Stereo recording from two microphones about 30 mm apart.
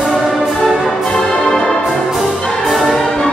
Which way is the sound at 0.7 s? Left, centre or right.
Centre.